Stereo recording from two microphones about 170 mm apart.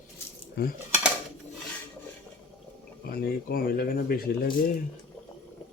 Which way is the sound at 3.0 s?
65° left (ahead or behind).